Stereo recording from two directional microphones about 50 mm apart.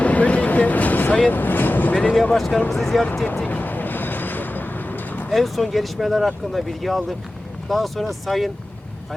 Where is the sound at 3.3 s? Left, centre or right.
Left.